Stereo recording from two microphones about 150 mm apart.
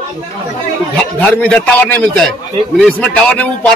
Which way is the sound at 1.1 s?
5° left (ahead or behind).